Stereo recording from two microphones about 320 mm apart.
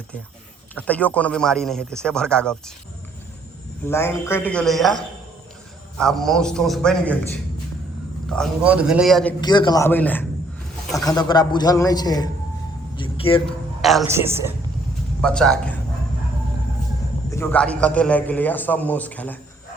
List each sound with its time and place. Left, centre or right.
0.8 s a man's voice: centre
3.8 s a man's voice: centre
8.3 s a man's voice: centre
9.4 s a man's voice: centre
13.0 s vehicle: centre
13.8 s a man's voice: centre
15.2 s a man's voice: centre
17.3 s a man's voice: centre